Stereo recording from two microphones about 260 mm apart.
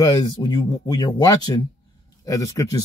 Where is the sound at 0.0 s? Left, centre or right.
Centre.